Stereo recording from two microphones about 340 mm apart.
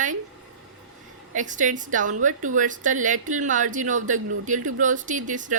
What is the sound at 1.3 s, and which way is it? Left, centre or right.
Speech, right.